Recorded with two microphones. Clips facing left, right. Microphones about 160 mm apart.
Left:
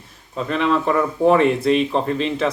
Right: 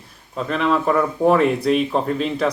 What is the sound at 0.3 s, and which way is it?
Speech, centre (ahead or behind).